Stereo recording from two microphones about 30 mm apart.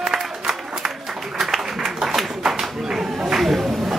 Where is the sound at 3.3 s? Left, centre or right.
Centre.